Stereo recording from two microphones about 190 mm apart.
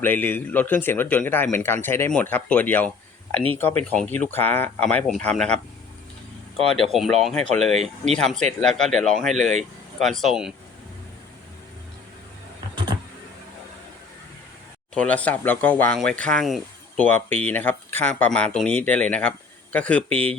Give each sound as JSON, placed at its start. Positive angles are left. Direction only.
{"t": 0.0, "sound": "speech", "side_deg": 10}
{"t": 6.7, "sound": "speech", "side_deg": 0}
{"t": 7.7, "sound": "speech", "side_deg": -35}
{"t": 8.1, "sound": "speech", "side_deg": 5}
{"t": 14.9, "sound": "speech", "side_deg": 5}